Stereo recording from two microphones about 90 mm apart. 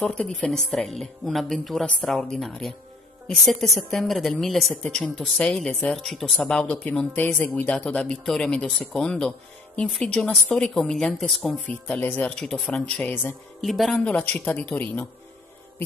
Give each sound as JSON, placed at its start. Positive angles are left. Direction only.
{"t": 0.0, "sound": "a woman's voice", "side_deg": 15}
{"t": 11.6, "sound": "speech", "side_deg": 15}
{"t": 13.9, "sound": "speech", "side_deg": 10}